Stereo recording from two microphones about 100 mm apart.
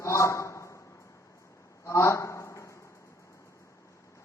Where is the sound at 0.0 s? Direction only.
30° left (ahead or behind).